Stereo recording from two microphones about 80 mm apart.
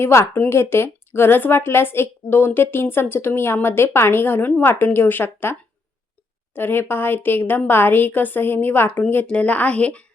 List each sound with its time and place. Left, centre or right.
0.0 s a woman's voice: left; by 10.1 s centre